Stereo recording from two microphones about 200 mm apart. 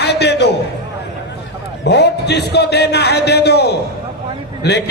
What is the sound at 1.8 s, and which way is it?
Music, 55° left (ahead or behind).